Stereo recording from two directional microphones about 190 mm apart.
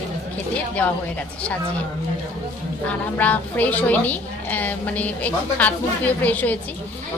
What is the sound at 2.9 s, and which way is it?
A woman's voice, 10° left (ahead or behind).